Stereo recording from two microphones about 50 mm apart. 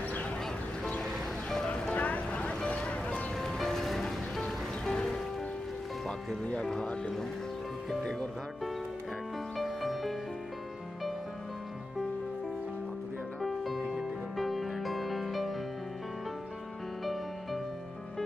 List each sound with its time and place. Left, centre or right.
1.0 s music: centre
2.0 s music: left
3.3 s music: centre
6.0 s music: left
6.6 s speech: centre
8.0 s speech: centre
9.6 s music: centre
13.4 s music: centre
17.0 s music: centre